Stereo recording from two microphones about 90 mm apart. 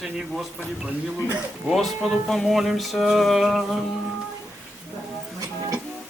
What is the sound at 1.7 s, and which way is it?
Speech, centre (ahead or behind).